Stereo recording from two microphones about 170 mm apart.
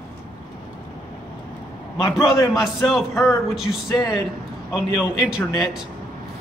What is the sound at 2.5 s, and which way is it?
Speech, centre (ahead or behind).